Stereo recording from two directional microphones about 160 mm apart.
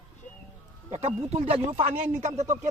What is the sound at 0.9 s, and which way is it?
Speech, 40° right (ahead or behind).